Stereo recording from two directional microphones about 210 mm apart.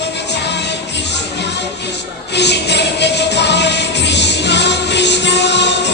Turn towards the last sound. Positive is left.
turn(degrees=55)  # may be behind; listen again after turning